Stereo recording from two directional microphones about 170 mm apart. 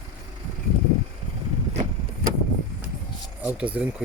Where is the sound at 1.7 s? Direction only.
45° right (ahead or behind).